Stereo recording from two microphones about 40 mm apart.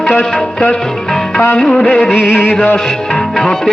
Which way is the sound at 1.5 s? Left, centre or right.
Centre.